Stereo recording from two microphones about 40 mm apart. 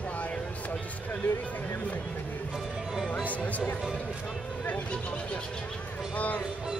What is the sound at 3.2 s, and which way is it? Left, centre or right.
Speech, left.